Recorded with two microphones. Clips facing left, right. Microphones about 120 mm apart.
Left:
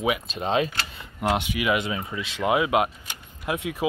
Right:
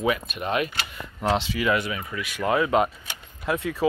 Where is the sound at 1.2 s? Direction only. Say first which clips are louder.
Right 1 dB; 15° left (ahead or behind).